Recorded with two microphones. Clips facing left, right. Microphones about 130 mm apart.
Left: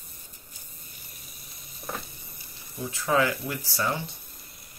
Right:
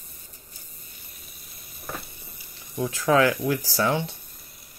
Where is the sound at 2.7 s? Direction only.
90° right.